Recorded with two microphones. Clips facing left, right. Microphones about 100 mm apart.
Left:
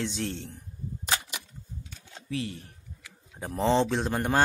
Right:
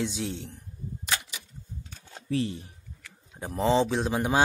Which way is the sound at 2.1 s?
35° right (ahead or behind).